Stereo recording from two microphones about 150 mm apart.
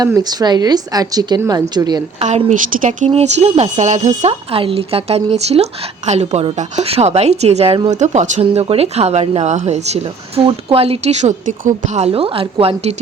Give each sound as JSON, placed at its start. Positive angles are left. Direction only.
{"t": 0.0, "sound": "a woman's voice", "side_deg": -25}
{"t": 2.1, "sound": "speech", "side_deg": -50}
{"t": 8.4, "sound": "speech", "side_deg": -40}